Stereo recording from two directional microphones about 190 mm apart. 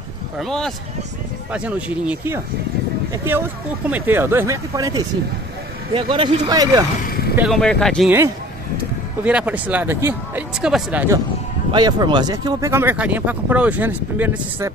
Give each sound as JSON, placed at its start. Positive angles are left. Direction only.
{"t": 0.4, "sound": "speech", "side_deg": 0}
{"t": 7.1, "sound": "vehicle", "side_deg": 55}
{"t": 7.3, "sound": "speech", "side_deg": 0}
{"t": 9.2, "sound": "speech", "side_deg": -5}
{"t": 11.7, "sound": "speech", "side_deg": -20}